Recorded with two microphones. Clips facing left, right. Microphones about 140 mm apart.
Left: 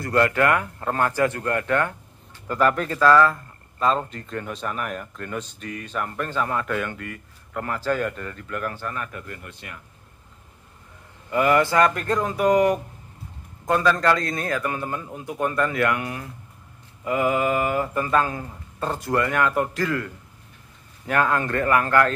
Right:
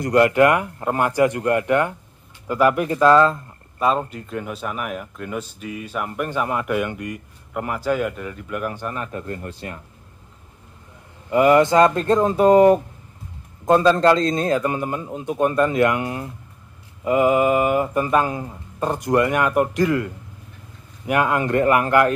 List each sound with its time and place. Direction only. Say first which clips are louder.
0.0 s speech: right 5 dB; 20° right (ahead or behind)
3.8 s speech: right 2 dB; 10° right (ahead or behind); by 9.8 s 35° right (ahead or behind)
11.2 s mantra: right 5 dB; 20° right (ahead or behind)
21.1 s speech: right 3 dB; 15° right (ahead or behind)